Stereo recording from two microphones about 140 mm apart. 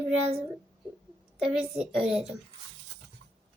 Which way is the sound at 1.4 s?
5° right (ahead or behind).